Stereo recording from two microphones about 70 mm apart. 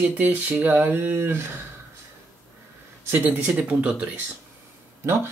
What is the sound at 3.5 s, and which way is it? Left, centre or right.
Speech, centre.